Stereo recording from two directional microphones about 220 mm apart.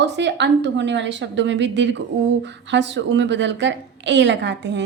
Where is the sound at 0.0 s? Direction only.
50° right (ahead or behind).